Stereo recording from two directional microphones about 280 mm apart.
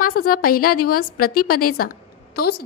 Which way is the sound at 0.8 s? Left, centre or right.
Left.